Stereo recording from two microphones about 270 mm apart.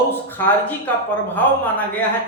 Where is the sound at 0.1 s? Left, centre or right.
Centre.